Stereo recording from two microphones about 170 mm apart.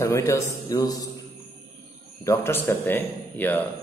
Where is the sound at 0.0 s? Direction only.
15° left (ahead or behind).